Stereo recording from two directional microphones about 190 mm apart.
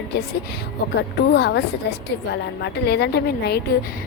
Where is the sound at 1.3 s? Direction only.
65° left (ahead or behind).